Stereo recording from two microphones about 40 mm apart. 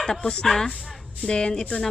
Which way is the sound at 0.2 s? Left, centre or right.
Left.